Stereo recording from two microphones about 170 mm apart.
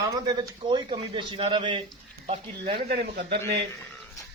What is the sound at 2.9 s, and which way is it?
Speech, 60° right (ahead or behind).